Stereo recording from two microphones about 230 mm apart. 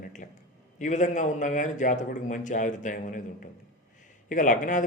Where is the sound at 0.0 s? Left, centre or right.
Left.